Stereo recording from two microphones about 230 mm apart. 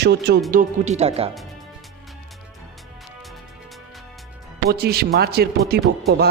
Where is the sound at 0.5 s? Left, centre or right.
Right.